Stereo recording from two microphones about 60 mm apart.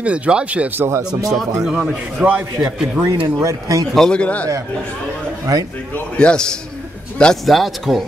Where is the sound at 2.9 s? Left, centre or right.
Right.